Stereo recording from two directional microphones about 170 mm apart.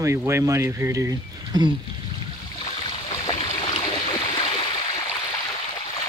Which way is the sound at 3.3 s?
35° left (ahead or behind).